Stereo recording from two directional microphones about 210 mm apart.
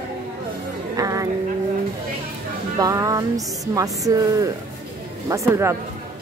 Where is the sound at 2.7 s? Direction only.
15° right (ahead or behind).